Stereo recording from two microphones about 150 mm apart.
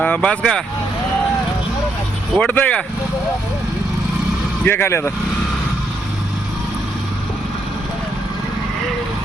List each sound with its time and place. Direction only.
0.0 s speech: 10° left (ahead or behind)
2.3 s speech: 10° left (ahead or behind)
4.6 s speech: 15° left (ahead or behind)